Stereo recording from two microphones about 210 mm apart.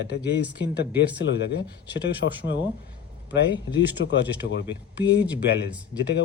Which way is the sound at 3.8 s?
55° left (ahead or behind).